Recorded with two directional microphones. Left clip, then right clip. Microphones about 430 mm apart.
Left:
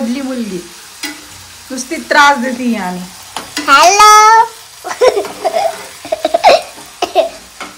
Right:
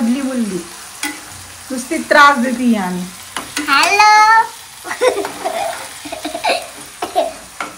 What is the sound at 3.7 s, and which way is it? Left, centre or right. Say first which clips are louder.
Speech: left 5 dB; centre.